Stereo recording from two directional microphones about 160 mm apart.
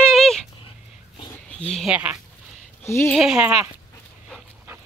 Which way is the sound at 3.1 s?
5° right (ahead or behind).